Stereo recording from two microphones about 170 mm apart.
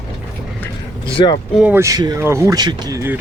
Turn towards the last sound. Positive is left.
turn(degrees=-15)  # may be behind; listen again after turning